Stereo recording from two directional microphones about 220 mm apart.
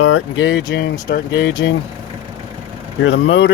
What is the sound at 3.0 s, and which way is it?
Speech, 55° left (ahead or behind).